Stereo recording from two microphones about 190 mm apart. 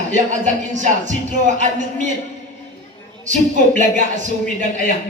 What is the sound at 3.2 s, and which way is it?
Speech, 40° right (ahead or behind).